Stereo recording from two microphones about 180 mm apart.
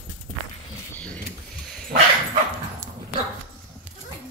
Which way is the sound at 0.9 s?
10° left (ahead or behind).